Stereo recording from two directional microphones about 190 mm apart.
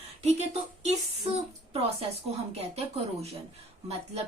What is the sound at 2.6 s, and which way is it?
Speech, 35° right (ahead or behind).